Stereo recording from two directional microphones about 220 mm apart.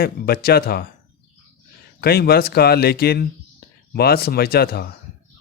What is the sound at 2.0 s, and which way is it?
Speech, 45° left (ahead or behind).